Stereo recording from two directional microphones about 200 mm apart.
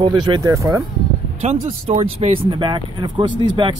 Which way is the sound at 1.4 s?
30° right (ahead or behind).